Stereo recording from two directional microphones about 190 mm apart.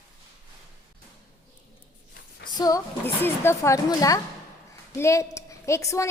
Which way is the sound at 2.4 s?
20° left (ahead or behind).